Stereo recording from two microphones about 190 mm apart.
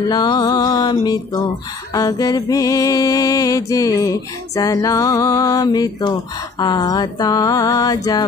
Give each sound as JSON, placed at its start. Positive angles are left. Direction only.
{"t": 0.1, "sound": "music", "side_deg": 20}